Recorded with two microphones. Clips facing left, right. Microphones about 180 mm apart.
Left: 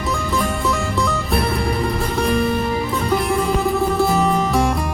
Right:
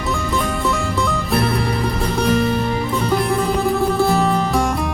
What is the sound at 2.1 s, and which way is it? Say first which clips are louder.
Music: right 1 dB; centre (ahead or behind).